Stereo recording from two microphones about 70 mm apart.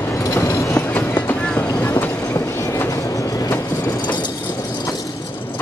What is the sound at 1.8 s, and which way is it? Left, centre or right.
Train, left.